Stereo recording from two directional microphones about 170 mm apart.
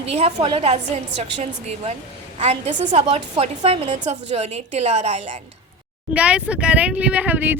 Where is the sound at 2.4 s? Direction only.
40° right (ahead or behind).